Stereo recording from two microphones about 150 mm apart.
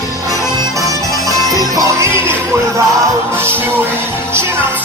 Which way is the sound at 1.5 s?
25° right (ahead or behind).